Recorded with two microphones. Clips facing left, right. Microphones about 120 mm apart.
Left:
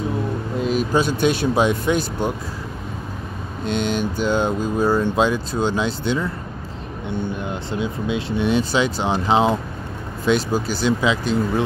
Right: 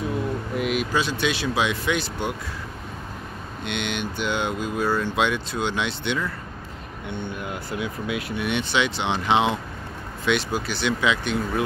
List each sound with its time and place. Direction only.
0.6 s a sound: 30° left (ahead or behind)
0.9 s speech: 45° left (ahead or behind)
3.6 s speech: 40° left (ahead or behind)
4.8 s speech: 15° left (ahead or behind)
5.1 s speech: 35° left (ahead or behind)
7.3 s speech: 25° left (ahead or behind)